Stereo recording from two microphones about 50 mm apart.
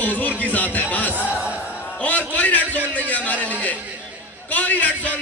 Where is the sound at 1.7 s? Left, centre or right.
Left.